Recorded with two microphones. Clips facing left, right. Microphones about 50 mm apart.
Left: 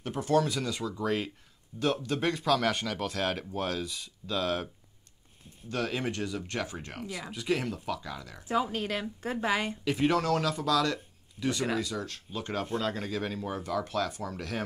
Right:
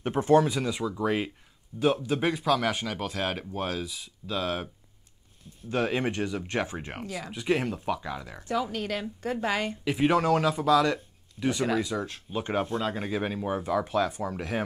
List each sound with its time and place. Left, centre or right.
0.0 s speech: right; by 4.6 s centre
5.7 s speech: right
7.1 s speech: centre
8.5 s speech: left
8.7 s a woman's voice: left
9.8 s speech: centre